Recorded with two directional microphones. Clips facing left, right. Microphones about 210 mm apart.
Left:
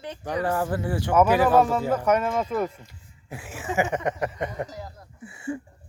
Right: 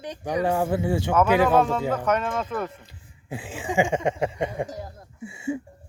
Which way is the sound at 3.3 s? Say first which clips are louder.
Right 2 dB; 30° right (ahead or behind).